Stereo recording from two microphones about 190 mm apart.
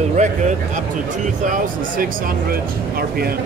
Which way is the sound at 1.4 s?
45° right (ahead or behind).